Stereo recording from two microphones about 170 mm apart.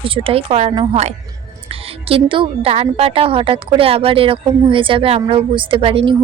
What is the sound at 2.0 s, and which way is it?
A woman's voice, 30° right (ahead or behind).